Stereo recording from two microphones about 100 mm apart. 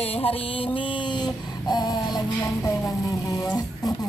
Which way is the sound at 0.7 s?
60° left (ahead or behind).